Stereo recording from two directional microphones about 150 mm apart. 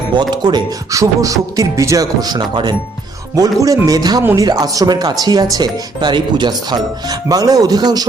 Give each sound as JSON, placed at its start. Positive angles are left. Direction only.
{"t": 0.2, "sound": "speech", "side_deg": -30}
{"t": 4.2, "sound": "speech", "side_deg": -15}
{"t": 4.4, "sound": "speech", "side_deg": -25}